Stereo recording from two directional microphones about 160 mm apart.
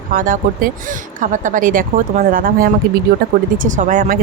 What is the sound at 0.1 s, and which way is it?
Speech, 60° right (ahead or behind).